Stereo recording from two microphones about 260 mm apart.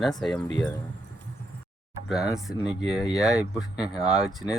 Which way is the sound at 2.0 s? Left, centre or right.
Centre.